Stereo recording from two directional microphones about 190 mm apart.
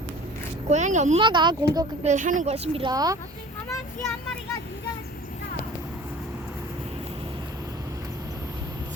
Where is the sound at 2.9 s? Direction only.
20° right (ahead or behind).